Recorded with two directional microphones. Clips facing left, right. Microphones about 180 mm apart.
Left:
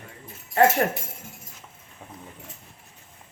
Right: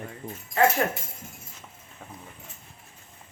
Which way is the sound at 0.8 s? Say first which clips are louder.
Left 2 dB; 45° left (ahead or behind).